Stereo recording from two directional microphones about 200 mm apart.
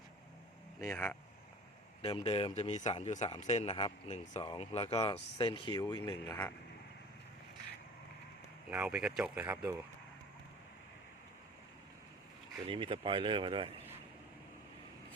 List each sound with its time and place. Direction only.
0.8 s speech: 10° left (ahead or behind)
2.0 s speech: 30° left (ahead or behind)
8.7 s speech: 5° right (ahead or behind)
12.6 s speech: 25° right (ahead or behind)